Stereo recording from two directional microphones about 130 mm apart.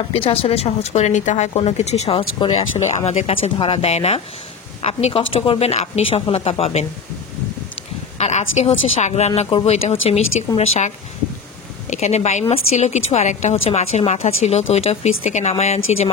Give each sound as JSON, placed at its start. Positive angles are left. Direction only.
{"t": 0.1, "sound": "speech", "side_deg": 45}
{"t": 8.2, "sound": "a woman's voice", "side_deg": 60}
{"t": 11.9, "sound": "a woman's voice", "side_deg": 60}